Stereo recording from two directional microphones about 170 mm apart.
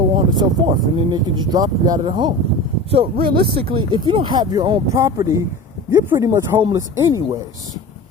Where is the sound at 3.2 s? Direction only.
65° right (ahead or behind).